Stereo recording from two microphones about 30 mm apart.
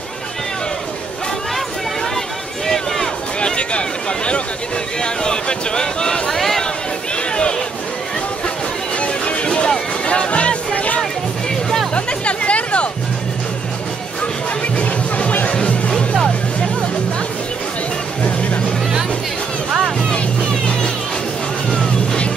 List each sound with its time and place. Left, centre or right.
2.6 s run: centre
3.3 s a sound: left
5.0 s speech: left
6.3 s a sound: centre
9.0 s music: left
14.8 s music: left
20.3 s music: left